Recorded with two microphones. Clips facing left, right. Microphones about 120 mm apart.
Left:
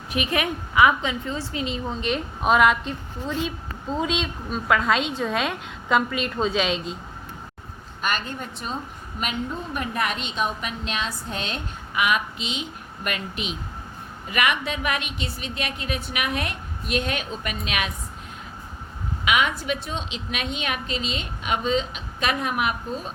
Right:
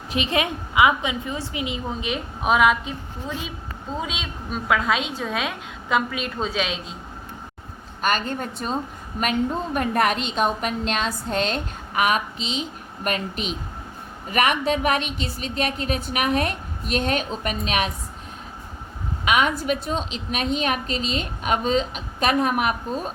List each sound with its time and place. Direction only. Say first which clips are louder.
0.1 s a woman's voice: right 1 dB; 25° right (ahead or behind); by 6.9 s centre (ahead or behind)
8.0 s a woman's voice: right 4 dB; 45° right (ahead or behind)
19.2 s a woman's voice: right 2 dB; 40° right (ahead or behind)